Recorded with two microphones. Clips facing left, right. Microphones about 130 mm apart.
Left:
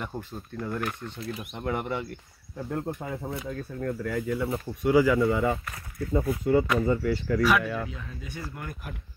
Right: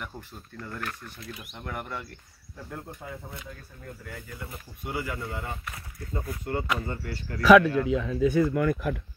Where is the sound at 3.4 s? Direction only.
75° left (ahead or behind); by 5.1 s 90° left.